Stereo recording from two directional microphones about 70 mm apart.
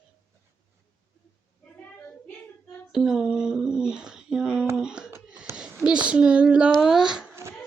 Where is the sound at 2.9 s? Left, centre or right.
Centre.